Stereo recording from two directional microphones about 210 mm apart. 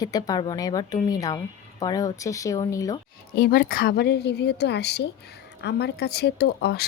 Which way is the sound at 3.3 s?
45° left (ahead or behind).